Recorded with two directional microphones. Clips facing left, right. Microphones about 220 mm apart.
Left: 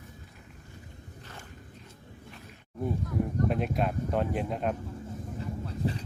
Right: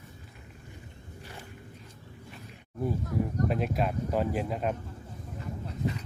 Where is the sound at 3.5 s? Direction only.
Centre (ahead or behind).